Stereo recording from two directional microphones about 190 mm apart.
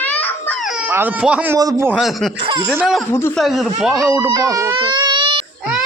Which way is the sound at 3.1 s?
10° left (ahead or behind).